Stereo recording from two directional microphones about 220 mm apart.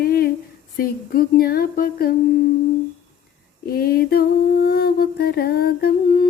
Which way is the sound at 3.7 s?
45° left (ahead or behind).